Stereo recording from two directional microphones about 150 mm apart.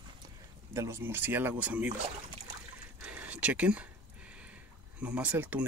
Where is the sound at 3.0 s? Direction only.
10° right (ahead or behind).